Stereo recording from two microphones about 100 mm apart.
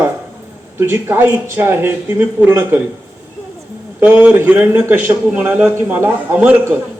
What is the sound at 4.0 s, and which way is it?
A man's voice, 15° right (ahead or behind).